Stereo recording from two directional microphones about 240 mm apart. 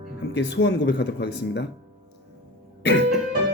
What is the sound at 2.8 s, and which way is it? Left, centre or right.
Speech, left.